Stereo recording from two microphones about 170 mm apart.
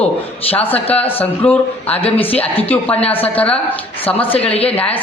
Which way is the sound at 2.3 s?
35° left (ahead or behind).